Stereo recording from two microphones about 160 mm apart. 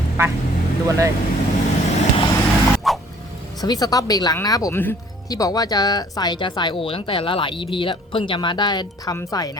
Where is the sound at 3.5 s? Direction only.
25° left (ahead or behind).